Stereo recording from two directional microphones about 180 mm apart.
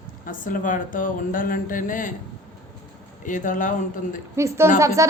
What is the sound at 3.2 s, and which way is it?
Speech, 45° left (ahead or behind).